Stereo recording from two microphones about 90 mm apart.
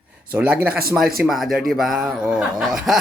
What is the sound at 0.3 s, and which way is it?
Speech, 15° right (ahead or behind).